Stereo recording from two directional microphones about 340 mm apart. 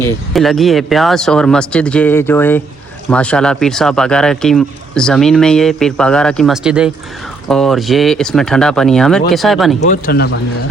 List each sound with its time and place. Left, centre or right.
0.0 s speech: centre
9.8 s speech: left